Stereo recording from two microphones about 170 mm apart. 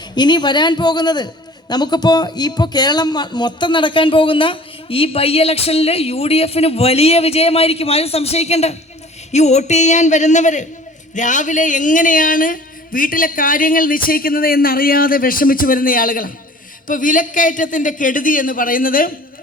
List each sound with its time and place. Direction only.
0.2 s speech: 25° left (ahead or behind); by 19.1 s 55° left (ahead or behind)